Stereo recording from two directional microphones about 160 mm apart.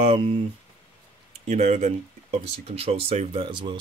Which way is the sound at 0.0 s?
35° right (ahead or behind).